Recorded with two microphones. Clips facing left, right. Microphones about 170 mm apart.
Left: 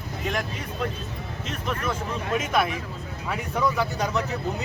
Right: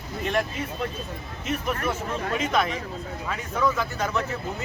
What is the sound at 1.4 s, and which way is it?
Speech, 10° right (ahead or behind).